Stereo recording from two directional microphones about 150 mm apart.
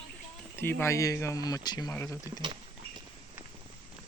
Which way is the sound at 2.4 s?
30° right (ahead or behind).